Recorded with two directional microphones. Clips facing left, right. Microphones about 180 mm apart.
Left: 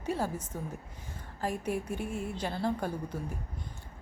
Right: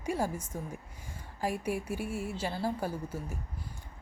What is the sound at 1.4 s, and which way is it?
A woman's voice, 10° right (ahead or behind).